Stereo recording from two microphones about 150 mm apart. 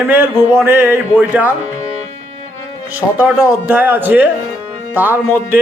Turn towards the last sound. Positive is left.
turn(degrees=-10)  # may be behind; listen again after turning